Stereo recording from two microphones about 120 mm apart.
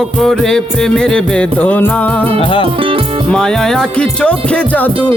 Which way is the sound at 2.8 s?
45° right (ahead or behind).